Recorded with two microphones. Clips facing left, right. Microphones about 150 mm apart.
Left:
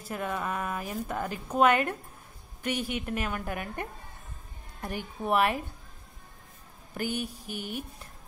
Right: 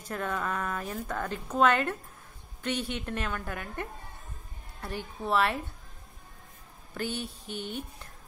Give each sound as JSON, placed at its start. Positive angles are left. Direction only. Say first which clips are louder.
{"t": 0.0, "sound": "a woman's voice", "louder": "even", "side_deg": 10}
{"t": 4.8, "sound": "a woman's voice", "louder": "left 2 dB", "side_deg": 15}
{"t": 6.9, "sound": "a woman's voice", "louder": "left 2 dB", "side_deg": 10}